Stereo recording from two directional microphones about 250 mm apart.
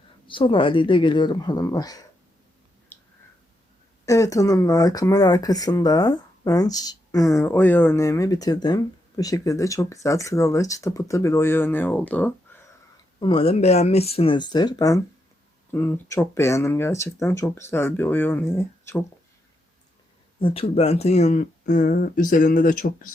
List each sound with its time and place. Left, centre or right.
0.3 s speech: centre
4.0 s speech: centre
13.1 s speech: centre
20.4 s speech: left